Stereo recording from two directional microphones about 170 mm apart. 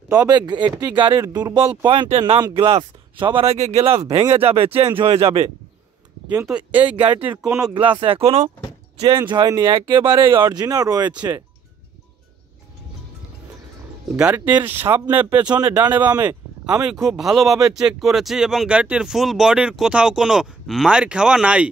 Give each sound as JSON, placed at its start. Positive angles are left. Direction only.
{"t": 0.1, "sound": "speech", "side_deg": -20}
{"t": 6.2, "sound": "speech", "side_deg": -10}
{"t": 7.7, "sound": "speech", "side_deg": -30}
{"t": 9.3, "sound": "speech", "side_deg": -25}
{"t": 14.1, "sound": "speech", "side_deg": -10}